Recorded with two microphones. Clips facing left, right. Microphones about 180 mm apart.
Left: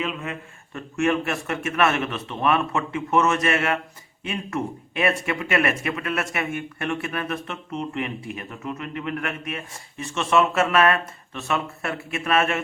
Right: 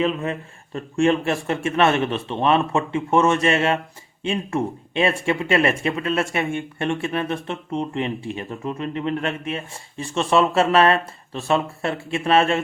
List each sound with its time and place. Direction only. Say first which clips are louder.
0.0 s speech: right 7 dB; 35° right (ahead or behind)